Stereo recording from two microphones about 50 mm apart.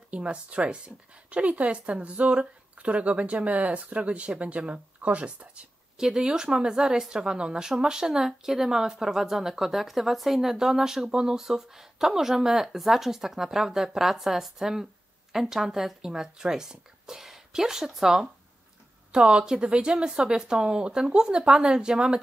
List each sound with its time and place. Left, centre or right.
0.1 s speech: right
5.9 s speech: centre